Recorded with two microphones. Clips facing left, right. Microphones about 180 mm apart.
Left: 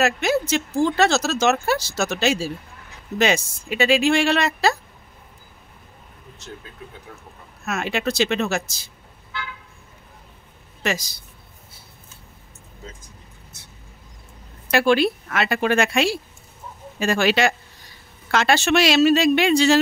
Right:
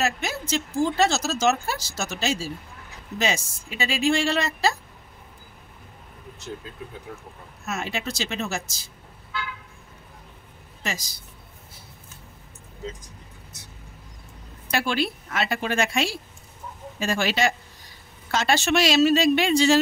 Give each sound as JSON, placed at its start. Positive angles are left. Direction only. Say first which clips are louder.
{"t": 0.0, "sound": "speech", "louder": "left 7 dB", "side_deg": 70}
{"t": 7.6, "sound": "speech", "louder": "left 6 dB", "side_deg": 70}
{"t": 10.8, "sound": "speech", "louder": "left 7 dB", "side_deg": 70}
{"t": 14.7, "sound": "a woman's voice", "louder": "left 8 dB", "side_deg": 65}